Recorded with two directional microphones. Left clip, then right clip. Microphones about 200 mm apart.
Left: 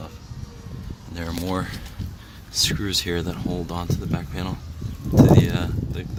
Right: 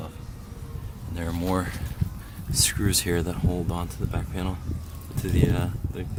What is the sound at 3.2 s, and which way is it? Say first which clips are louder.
Speech: left 1 dB; centre (ahead or behind).